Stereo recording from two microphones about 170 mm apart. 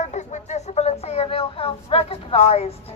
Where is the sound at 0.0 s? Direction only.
45° left (ahead or behind).